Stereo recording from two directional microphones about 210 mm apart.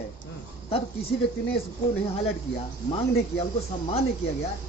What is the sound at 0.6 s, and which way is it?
Speech, 25° left (ahead or behind).